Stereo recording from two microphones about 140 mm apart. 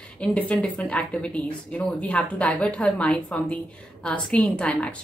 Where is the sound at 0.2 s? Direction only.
10° left (ahead or behind).